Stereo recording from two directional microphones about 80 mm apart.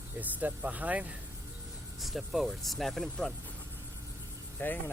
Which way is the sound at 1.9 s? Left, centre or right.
Centre.